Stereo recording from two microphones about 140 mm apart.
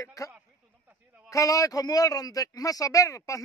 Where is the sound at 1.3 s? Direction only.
25° left (ahead or behind).